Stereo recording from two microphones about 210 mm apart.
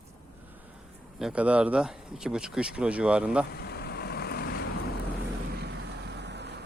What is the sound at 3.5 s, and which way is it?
Vehicle, 50° left (ahead or behind).